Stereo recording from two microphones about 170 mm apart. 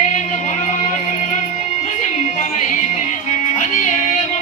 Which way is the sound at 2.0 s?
45° left (ahead or behind).